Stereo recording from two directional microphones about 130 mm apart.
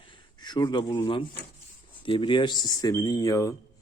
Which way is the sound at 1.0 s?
40° left (ahead or behind).